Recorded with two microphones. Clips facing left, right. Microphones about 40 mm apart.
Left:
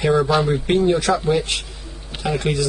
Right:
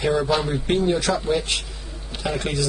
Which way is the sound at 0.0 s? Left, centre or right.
Centre.